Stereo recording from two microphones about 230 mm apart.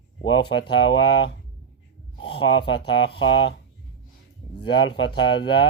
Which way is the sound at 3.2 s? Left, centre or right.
Left.